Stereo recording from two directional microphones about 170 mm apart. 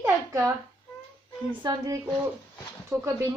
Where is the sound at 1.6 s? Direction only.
25° right (ahead or behind).